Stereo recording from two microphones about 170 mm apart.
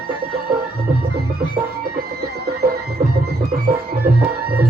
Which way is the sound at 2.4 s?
65° right (ahead or behind).